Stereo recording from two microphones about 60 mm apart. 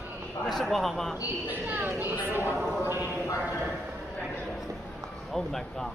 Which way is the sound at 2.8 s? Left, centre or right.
Right.